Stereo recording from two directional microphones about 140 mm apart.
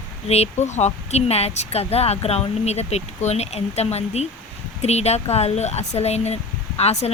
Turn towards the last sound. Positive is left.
turn(degrees=50)  # may be behind; listen again after turning